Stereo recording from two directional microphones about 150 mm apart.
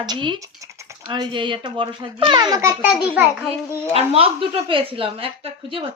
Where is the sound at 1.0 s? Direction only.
30° right (ahead or behind).